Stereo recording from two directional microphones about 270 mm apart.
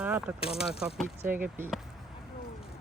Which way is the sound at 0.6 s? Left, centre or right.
Centre.